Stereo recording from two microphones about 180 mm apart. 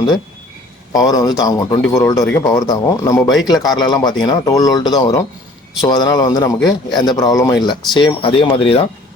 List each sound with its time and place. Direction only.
0.9 s speech: 20° left (ahead or behind)